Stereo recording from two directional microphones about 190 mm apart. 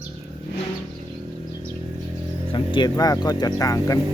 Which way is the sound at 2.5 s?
25° left (ahead or behind).